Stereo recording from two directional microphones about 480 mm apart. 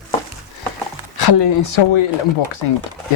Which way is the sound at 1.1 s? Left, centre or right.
Left.